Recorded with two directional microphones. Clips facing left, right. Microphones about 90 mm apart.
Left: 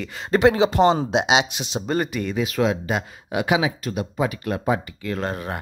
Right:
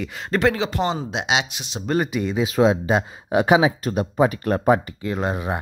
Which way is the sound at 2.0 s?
15° right (ahead or behind).